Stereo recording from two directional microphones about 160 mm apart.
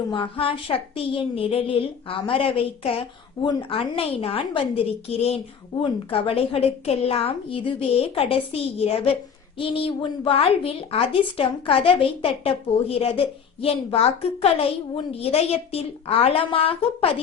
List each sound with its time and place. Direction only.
0.1 s speech: 35° left (ahead or behind)